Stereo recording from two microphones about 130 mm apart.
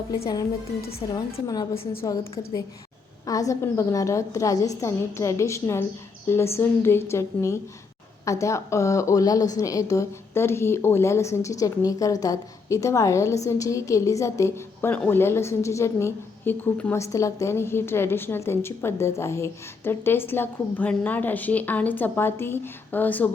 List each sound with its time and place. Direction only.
0.1 s a woman's voice: 30° left (ahead or behind)
1.7 s a woman's voice: 50° left (ahead or behind)
3.2 s a woman's voice: 25° left (ahead or behind)